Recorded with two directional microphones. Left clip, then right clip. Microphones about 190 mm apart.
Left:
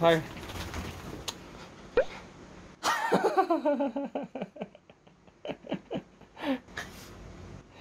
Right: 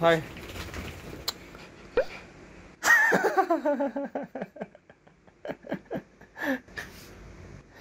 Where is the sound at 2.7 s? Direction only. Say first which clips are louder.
Right 7 dB; centre (ahead or behind).